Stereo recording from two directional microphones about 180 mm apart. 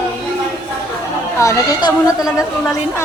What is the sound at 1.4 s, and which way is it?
A man's voice, 15° left (ahead or behind).